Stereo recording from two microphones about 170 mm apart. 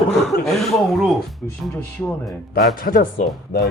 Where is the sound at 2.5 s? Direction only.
60° left (ahead or behind).